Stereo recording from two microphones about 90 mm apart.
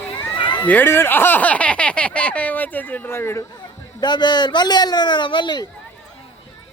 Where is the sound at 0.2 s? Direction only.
60° left (ahead or behind).